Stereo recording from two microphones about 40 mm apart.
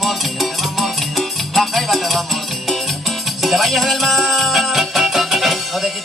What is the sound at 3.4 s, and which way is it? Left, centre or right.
Music, centre.